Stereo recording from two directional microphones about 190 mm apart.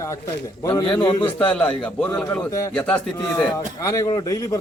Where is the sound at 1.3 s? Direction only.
5° left (ahead or behind).